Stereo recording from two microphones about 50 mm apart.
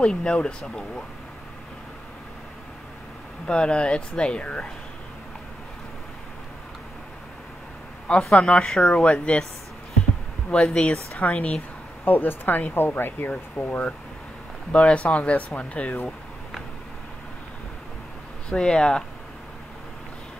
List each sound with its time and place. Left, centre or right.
0.0 s speech: centre
3.4 s speech: centre
8.4 s speech: left
10.5 s speech: centre
10.8 s speech: left
12.0 s speech: left
14.7 s speech: left
18.5 s speech: centre